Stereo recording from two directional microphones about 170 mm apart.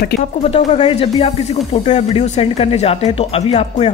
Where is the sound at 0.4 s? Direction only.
40° left (ahead or behind).